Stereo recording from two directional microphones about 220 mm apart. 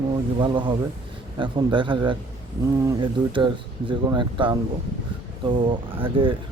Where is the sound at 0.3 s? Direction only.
20° right (ahead or behind).